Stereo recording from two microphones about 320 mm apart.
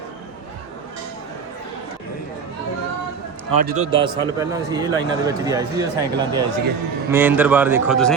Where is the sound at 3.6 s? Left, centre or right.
Centre.